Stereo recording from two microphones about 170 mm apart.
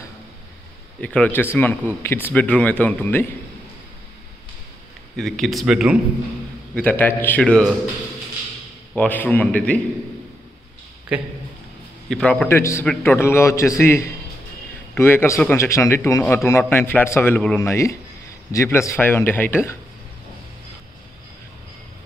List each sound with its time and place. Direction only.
1.0 s speech: 10° left (ahead or behind)
5.1 s speech: centre (ahead or behind)
6.7 s speech: 10° left (ahead or behind)
8.9 s speech: 10° left (ahead or behind)
12.1 s speech: 5° left (ahead or behind)